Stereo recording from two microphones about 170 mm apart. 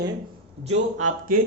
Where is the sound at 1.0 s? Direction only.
55° right (ahead or behind).